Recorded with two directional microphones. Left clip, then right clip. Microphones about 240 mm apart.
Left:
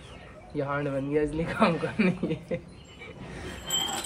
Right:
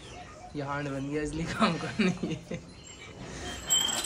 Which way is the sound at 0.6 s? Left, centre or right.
Centre.